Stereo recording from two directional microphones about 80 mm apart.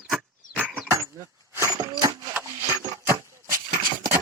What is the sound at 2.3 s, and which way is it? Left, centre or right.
Wood, right.